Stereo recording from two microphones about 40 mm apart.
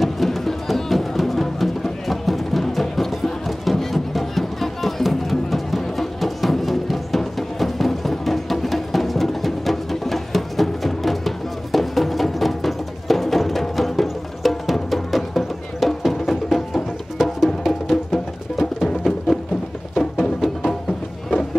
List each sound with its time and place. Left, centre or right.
0.0 s music: centre